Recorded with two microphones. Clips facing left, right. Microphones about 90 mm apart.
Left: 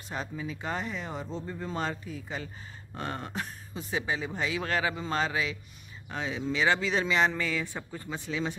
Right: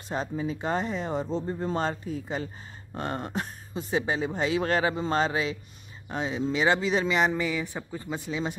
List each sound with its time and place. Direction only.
0.1 s speech: 35° right (ahead or behind)
3.9 s speech: 35° right (ahead or behind); by 8.5 s 20° right (ahead or behind)